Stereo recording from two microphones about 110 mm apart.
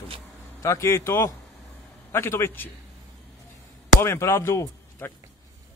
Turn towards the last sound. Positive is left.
turn(degrees=20)  # may be behind; listen again after turning